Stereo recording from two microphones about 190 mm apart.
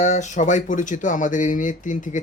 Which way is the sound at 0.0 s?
40° left (ahead or behind).